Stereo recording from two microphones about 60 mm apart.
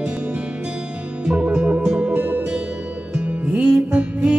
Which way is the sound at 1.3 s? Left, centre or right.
Centre.